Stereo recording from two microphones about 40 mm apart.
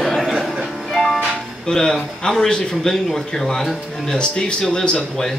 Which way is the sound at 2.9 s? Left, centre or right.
Centre.